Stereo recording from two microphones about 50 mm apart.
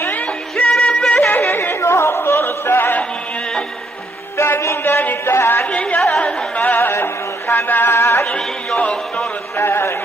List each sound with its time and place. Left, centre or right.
0.1 s music: left
0.7 s music: left
1.5 s music: left
4.4 s a sound: left
5.7 s chatter: left
5.9 s chatter: centre
6.2 s carnatic music: left
6.9 s a sound: left
7.9 s music: left
8.3 s music: centre
9.6 s a sound: left